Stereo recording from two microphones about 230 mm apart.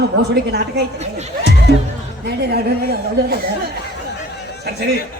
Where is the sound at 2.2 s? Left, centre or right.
Right.